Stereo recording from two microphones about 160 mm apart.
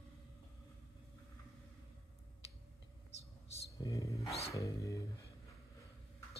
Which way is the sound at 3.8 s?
20° left (ahead or behind).